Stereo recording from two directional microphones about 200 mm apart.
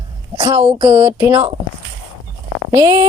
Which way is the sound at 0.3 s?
20° right (ahead or behind).